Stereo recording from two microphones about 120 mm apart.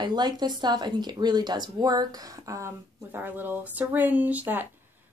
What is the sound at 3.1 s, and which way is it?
Speech, 15° right (ahead or behind).